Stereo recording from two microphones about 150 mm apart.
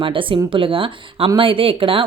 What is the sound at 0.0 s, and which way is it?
Speech, 35° right (ahead or behind).